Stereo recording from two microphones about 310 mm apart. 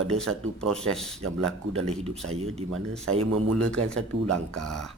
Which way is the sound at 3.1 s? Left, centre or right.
Right.